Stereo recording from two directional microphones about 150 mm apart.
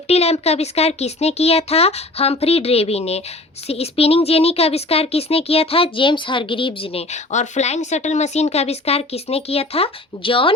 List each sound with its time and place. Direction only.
0.1 s speech: 45° left (ahead or behind)